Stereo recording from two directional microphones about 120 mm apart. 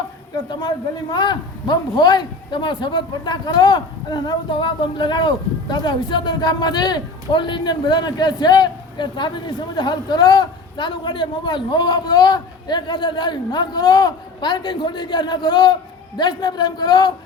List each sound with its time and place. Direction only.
1.1 s a man's voice: 35° left (ahead or behind)